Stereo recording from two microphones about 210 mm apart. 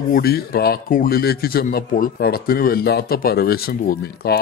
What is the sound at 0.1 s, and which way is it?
Speech, 45° left (ahead or behind).